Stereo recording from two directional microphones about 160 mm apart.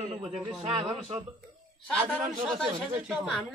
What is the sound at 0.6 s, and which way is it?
Speech, 35° right (ahead or behind).